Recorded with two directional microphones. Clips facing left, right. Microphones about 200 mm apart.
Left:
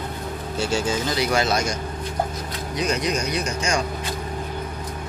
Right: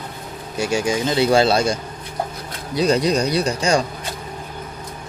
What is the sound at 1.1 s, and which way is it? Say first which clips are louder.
Speech: right 8 dB; 30° right (ahead or behind).